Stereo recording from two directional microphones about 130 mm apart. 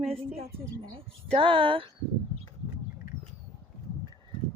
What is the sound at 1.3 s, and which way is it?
Speech, 40° right (ahead or behind).